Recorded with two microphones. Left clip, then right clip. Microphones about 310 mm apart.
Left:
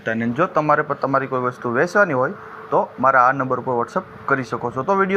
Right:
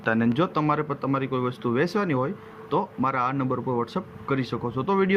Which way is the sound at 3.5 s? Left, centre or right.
Left.